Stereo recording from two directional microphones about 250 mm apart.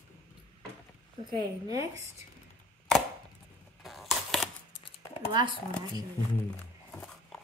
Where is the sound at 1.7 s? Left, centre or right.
Centre.